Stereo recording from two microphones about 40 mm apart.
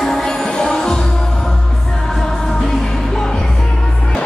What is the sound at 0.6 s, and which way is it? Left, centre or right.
Music, left.